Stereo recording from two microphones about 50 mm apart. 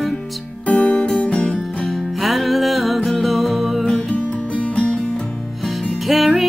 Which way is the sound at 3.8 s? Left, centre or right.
Left.